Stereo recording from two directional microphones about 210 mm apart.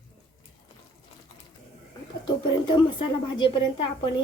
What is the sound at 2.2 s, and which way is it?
A woman's voice, 20° left (ahead or behind).